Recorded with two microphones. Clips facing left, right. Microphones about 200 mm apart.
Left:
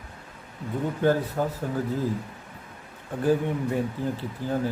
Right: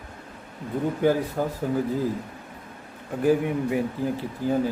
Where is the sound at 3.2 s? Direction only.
10° right (ahead or behind).